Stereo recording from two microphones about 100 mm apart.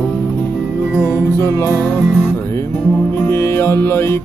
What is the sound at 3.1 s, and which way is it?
Music, 25° left (ahead or behind).